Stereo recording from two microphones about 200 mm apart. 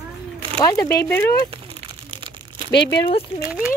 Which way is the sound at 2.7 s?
60° left (ahead or behind).